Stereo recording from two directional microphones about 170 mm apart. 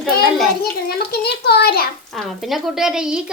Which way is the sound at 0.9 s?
70° left (ahead or behind).